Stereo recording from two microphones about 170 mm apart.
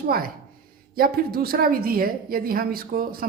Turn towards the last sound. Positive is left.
turn(degrees=-60)  # may be behind; listen again after turning